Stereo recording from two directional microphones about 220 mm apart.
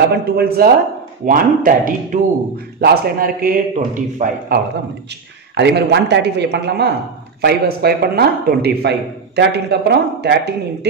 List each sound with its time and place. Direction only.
0.1 s a man's voice: 45° right (ahead or behind)
5.5 s a man's voice: 50° right (ahead or behind)